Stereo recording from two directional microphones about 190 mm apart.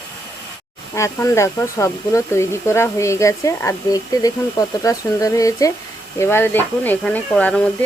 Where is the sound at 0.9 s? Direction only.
15° left (ahead or behind).